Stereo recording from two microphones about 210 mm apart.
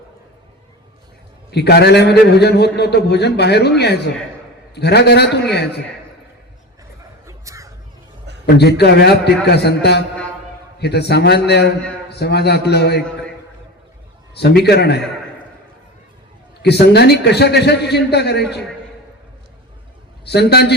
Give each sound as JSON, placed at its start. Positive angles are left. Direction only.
{"t": 1.5, "sound": "a man's voice", "side_deg": 50}
{"t": 7.3, "sound": "a sound", "side_deg": -15}
{"t": 8.5, "sound": "a man's voice", "side_deg": 55}
{"t": 14.3, "sound": "a man's voice", "side_deg": 50}
{"t": 16.6, "sound": "a man's voice", "side_deg": 50}
{"t": 20.2, "sound": "a man's voice", "side_deg": 50}